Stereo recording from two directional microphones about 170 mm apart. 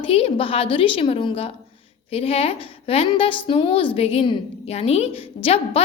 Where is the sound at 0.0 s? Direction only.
35° left (ahead or behind).